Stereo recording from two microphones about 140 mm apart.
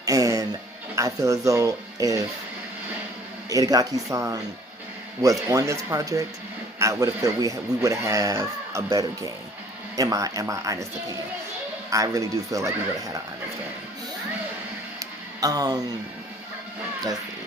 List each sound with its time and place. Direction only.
0.0 s music: 25° right (ahead or behind)
0.9 s speech: 25° right (ahead or behind)
3.5 s speech: 25° right (ahead or behind)
11.9 s speech: 25° right (ahead or behind)
14.9 s a sound: 25° right (ahead or behind)